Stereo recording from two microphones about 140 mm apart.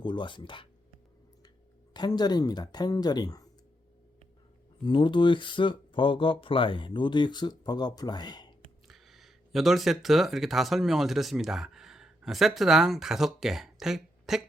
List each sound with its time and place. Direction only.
0.0 s speech: 35° left (ahead or behind)
1.9 s speech: 30° left (ahead or behind)
4.8 s speech: 35° left (ahead or behind)
8.9 s speech: centre (ahead or behind)